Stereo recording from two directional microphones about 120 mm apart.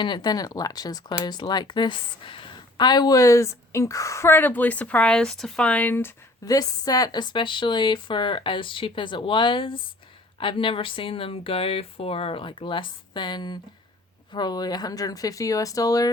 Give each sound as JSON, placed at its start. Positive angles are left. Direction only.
{"t": 0.0, "sound": "speech", "side_deg": 35}
{"t": 6.4, "sound": "speech", "side_deg": 30}